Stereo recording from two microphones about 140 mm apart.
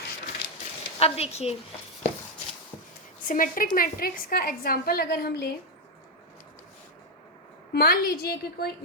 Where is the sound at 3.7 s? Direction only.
90° left.